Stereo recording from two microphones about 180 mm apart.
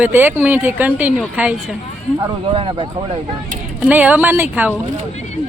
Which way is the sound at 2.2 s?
30° right (ahead or behind).